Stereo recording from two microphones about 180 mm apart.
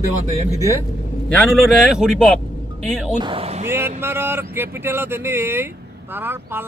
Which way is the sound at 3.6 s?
15° right (ahead or behind).